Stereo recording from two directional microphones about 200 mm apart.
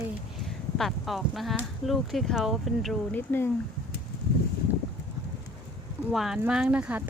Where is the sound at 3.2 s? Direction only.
10° left (ahead or behind).